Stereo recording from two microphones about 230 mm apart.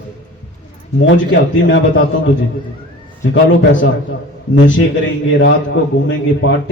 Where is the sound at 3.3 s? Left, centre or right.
Left.